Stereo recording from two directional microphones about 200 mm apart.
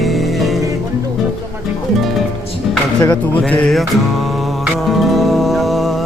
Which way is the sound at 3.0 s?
15° left (ahead or behind).